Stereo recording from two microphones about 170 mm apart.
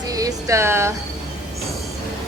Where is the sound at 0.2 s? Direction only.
20° right (ahead or behind).